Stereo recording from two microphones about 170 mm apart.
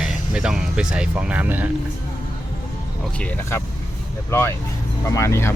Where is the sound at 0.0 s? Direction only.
5° right (ahead or behind).